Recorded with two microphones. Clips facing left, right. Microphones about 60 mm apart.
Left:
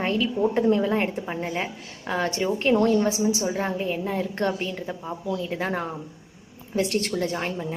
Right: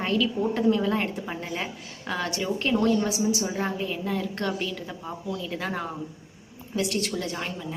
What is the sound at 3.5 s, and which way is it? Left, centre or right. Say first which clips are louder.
Speech: left 2 dB; centre.